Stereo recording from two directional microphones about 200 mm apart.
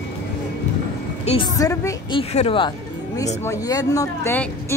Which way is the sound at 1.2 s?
25° left (ahead or behind).